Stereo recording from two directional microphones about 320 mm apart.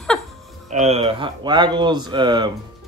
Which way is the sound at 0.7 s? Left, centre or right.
Right.